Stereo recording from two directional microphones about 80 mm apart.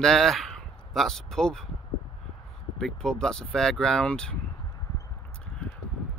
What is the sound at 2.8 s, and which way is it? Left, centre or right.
Speech, centre.